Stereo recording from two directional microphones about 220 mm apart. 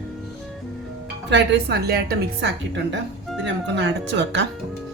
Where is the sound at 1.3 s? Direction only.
50° right (ahead or behind).